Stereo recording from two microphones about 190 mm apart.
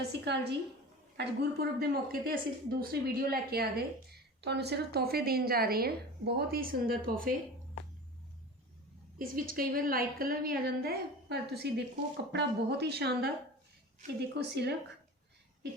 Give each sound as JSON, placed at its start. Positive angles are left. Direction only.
{"t": 0.0, "sound": "a woman's voice", "side_deg": -60}
{"t": 9.1, "sound": "a woman's voice", "side_deg": -50}